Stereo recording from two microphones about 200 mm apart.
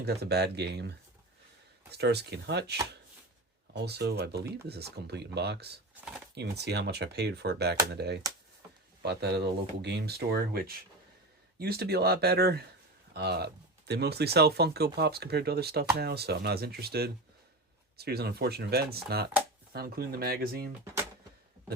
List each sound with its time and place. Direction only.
0.0 s speech: 55° right (ahead or behind)